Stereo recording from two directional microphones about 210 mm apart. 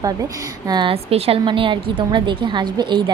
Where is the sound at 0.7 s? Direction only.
25° right (ahead or behind).